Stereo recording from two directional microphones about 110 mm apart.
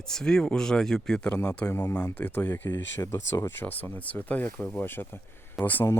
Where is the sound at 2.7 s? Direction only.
35° left (ahead or behind).